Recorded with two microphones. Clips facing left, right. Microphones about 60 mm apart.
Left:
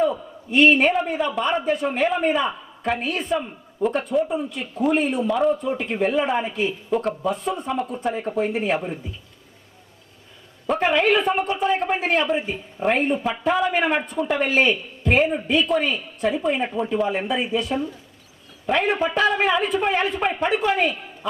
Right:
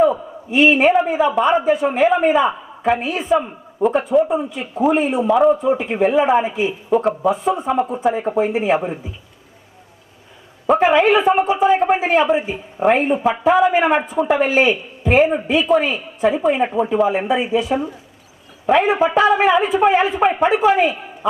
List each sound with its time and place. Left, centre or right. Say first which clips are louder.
0.5 s a man's voice: right 3 dB; centre
10.7 s a man's voice: right 6 dB; centre
13.4 s a man's voice: right 7 dB; centre
15.3 s a man's voice: right 5 dB; centre
16.6 s a man's voice: right 6 dB; centre